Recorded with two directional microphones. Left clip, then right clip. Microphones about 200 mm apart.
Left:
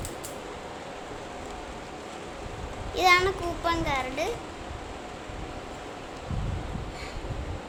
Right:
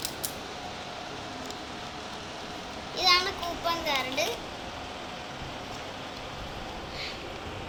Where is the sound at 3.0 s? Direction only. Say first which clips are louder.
Left 3 dB; 45° left (ahead or behind).